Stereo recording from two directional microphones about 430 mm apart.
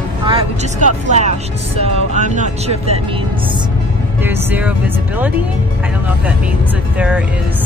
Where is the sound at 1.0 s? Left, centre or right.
Centre.